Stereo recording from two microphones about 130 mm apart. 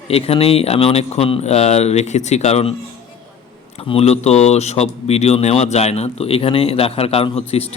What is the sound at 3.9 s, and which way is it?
Speech, 55° left (ahead or behind).